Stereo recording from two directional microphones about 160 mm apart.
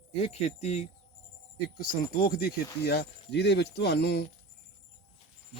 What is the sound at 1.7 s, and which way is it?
Speech, 65° left (ahead or behind).